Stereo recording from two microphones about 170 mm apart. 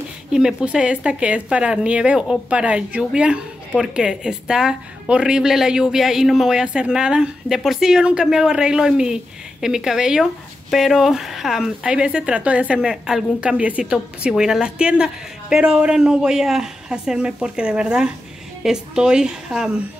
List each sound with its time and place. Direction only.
0.3 s speech: 5° right (ahead or behind)